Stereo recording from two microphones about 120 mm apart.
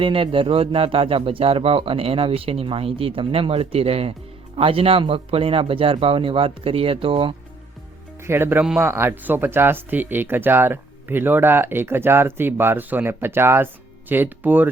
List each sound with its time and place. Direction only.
0.0 s a man's voice: 45° right (ahead or behind)
8.2 s speech: 20° right (ahead or behind)